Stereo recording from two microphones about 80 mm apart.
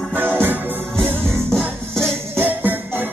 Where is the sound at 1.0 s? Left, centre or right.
Centre.